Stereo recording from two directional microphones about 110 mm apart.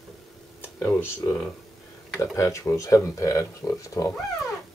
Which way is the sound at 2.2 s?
30° left (ahead or behind).